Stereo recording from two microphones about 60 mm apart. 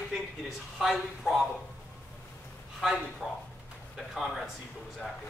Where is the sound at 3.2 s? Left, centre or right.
Centre.